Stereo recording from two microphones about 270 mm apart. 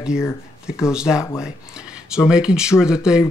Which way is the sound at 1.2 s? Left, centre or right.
Centre.